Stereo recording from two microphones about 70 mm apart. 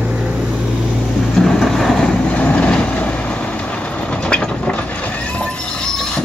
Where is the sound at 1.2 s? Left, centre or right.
Centre.